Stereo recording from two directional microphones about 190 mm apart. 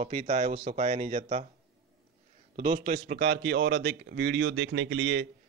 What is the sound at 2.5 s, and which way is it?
A man's voice, 35° right (ahead or behind).